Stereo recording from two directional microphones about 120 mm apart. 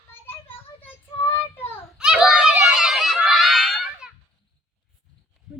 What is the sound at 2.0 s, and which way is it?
Screaming, 5° right (ahead or behind).